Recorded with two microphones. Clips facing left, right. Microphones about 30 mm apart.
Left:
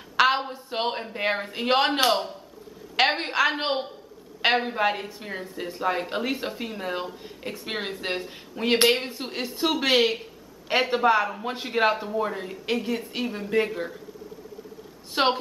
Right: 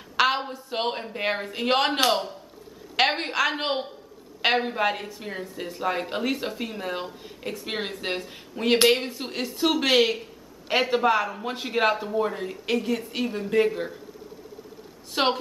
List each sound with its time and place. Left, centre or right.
0.2 s a sound: centre
0.7 s speech: centre
15.1 s speech: centre